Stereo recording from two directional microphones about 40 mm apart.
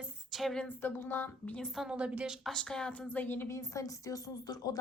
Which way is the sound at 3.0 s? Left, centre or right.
Left.